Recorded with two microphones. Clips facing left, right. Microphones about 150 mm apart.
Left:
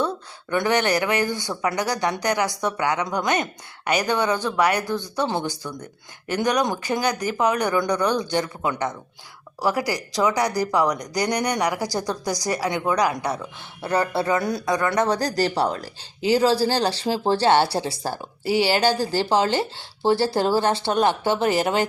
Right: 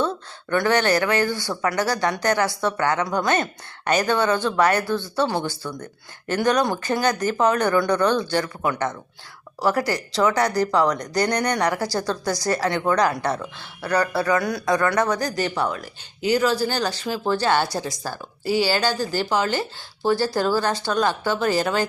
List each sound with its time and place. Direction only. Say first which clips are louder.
0.0 s speech: right 1 dB; 15° left (ahead or behind)
13.8 s speech: right 1 dB; 25° left (ahead or behind)